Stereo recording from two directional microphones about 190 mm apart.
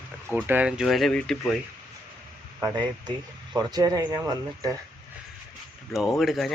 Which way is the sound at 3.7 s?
20° right (ahead or behind).